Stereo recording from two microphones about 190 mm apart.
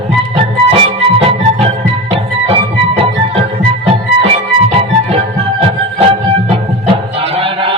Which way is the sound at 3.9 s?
30° right (ahead or behind).